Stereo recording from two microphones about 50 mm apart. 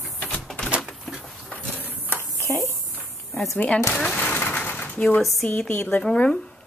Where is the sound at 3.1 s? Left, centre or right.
Centre.